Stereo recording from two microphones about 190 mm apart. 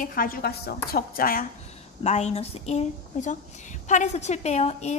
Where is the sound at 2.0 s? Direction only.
35° left (ahead or behind).